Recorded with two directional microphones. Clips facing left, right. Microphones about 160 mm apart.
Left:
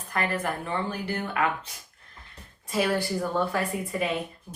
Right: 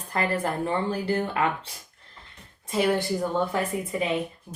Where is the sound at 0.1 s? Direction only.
30° right (ahead or behind).